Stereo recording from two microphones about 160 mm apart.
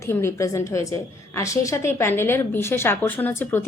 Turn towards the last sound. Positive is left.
turn(degrees=15)  # may be behind; listen again after turning